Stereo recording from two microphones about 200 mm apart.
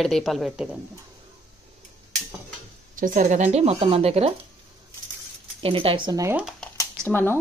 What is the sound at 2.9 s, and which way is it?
Speech, 40° right (ahead or behind).